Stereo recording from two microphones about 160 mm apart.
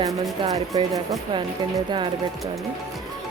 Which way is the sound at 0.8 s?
25° right (ahead or behind).